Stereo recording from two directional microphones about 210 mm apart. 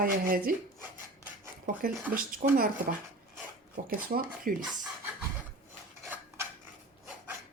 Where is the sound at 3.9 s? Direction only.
45° right (ahead or behind).